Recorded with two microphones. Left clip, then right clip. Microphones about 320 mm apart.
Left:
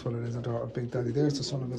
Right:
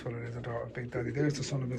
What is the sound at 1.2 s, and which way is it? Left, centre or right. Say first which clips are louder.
Speech: left 4 dB; centre.